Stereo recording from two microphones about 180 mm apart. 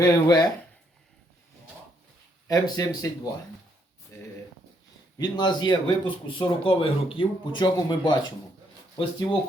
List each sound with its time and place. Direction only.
0.0 s speech: 20° left (ahead or behind)
2.5 s speech: 20° left (ahead or behind)
4.1 s a sound: 15° left (ahead or behind)
5.1 s speech: 25° left (ahead or behind)